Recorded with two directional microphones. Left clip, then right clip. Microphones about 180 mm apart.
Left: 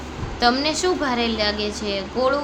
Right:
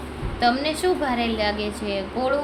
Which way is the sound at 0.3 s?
15° left (ahead or behind).